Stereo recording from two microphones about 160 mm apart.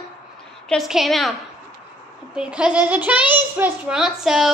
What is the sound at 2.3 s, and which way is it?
A child's voice, 5° right (ahead or behind).